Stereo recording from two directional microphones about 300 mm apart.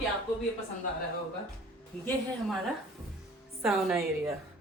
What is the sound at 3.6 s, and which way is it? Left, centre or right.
Speech, centre.